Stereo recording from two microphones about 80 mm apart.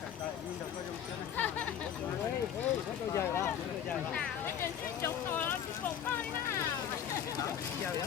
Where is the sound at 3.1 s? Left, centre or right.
Left.